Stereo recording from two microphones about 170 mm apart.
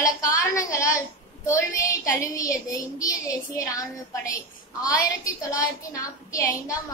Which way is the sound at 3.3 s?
20° left (ahead or behind).